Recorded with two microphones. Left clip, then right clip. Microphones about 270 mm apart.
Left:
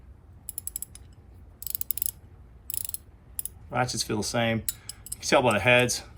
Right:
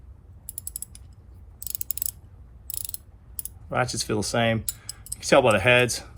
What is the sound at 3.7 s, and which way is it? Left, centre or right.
Speech, right.